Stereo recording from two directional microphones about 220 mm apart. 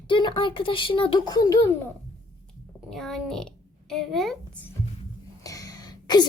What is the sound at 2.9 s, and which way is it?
A woman's voice, centre (ahead or behind).